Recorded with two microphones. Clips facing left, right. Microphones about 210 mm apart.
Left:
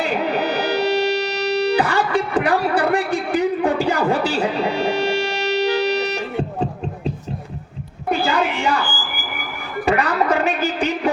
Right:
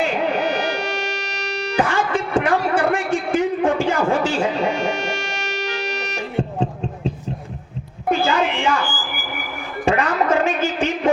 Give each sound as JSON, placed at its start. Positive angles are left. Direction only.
{"t": 0.0, "sound": "music", "side_deg": 35}
{"t": 8.1, "sound": "a sound", "side_deg": 35}
{"t": 9.8, "sound": "music", "side_deg": 35}